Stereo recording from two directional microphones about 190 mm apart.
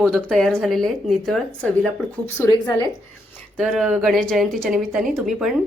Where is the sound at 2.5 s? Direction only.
25° left (ahead or behind).